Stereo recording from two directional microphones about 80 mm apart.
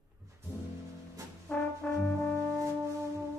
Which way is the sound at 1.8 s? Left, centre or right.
Centre.